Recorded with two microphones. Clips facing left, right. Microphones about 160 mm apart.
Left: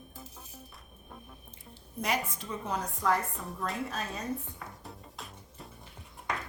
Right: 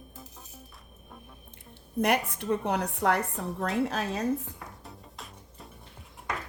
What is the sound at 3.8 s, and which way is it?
Speech, 80° right.